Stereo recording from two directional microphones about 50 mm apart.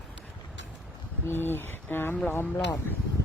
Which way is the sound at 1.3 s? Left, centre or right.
Left.